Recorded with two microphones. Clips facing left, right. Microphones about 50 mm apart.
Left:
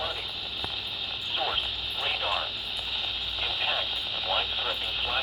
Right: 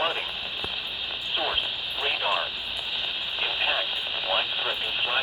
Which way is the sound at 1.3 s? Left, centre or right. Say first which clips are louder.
Right 2 dB; centre.